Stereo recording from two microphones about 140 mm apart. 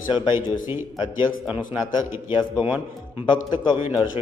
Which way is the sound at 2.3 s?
30° left (ahead or behind).